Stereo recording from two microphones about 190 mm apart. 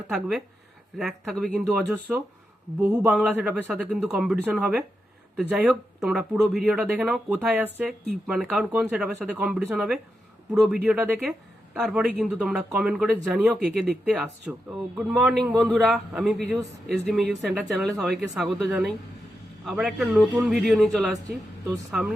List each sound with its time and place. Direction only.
0.1 s speech: centre (ahead or behind)
17.6 s speech: centre (ahead or behind)